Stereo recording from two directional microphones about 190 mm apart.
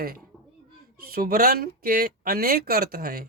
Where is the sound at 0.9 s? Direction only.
50° right (ahead or behind).